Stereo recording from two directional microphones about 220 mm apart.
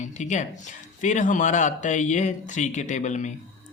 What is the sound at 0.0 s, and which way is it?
Speech, 35° left (ahead or behind).